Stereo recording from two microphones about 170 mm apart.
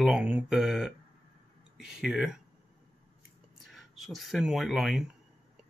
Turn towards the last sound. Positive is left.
turn(degrees=0)  # may be behind; listen again after turning